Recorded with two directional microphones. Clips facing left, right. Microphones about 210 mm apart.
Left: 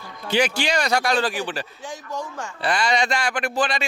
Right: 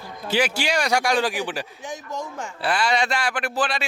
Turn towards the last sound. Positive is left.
turn(degrees=-5)  # may be behind; listen again after turning